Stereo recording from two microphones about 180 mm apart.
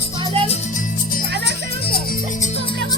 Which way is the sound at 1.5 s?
60° left (ahead or behind).